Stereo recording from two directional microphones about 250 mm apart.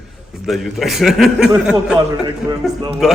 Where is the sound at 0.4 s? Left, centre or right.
Centre.